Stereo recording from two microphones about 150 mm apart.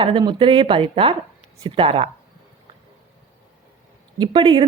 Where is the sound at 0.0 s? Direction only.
30° right (ahead or behind).